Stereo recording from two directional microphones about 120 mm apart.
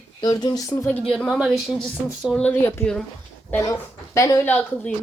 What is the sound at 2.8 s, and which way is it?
Speech, 20° left (ahead or behind).